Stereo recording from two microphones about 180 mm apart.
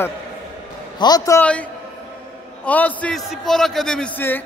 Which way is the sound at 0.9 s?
20° left (ahead or behind).